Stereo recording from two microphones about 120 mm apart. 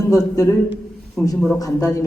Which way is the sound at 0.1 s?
30° left (ahead or behind).